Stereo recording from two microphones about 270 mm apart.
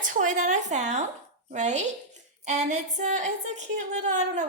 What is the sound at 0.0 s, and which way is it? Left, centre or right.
A woman's voice, right.